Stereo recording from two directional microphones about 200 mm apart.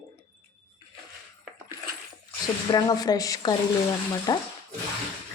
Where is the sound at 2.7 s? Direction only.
20° left (ahead or behind).